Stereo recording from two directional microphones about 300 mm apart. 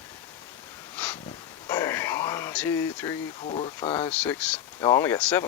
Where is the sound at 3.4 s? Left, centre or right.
Centre.